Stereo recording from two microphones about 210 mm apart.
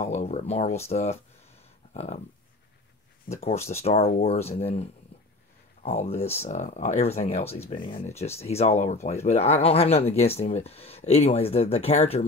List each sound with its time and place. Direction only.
0.0 s speech: 35° left (ahead or behind)
3.3 s speech: 30° left (ahead or behind)